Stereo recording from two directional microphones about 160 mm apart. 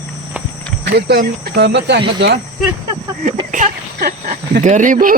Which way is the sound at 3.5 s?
50° right (ahead or behind).